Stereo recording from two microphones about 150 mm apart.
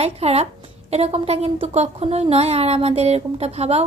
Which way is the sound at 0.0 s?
45° right (ahead or behind).